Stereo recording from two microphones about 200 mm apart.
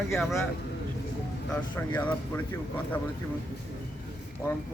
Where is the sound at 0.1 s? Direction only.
Centre (ahead or behind).